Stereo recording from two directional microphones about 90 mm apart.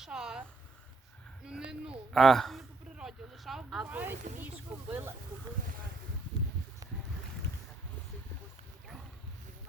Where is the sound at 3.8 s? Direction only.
20° right (ahead or behind).